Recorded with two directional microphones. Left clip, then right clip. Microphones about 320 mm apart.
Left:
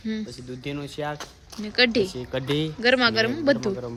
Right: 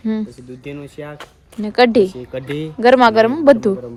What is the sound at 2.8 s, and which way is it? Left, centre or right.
Speech, centre.